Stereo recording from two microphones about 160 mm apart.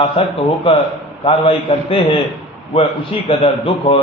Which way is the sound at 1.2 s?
35° left (ahead or behind).